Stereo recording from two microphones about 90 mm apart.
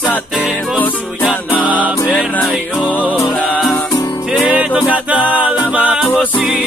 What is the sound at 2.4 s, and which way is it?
Music, centre (ahead or behind).